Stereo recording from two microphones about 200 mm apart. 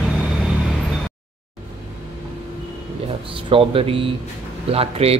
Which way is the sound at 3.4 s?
25° right (ahead or behind).